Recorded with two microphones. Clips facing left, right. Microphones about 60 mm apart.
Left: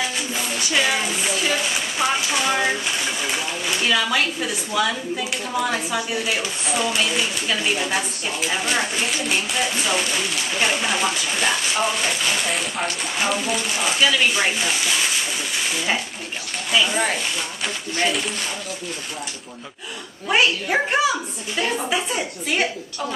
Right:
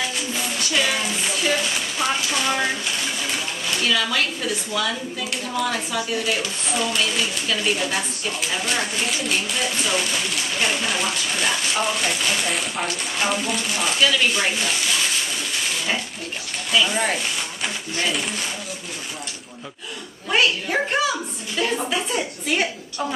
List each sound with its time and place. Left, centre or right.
0.3 s music: centre
1.2 s a sound: centre
3.2 s speech: centre
16.8 s speech: centre
20.2 s speech: centre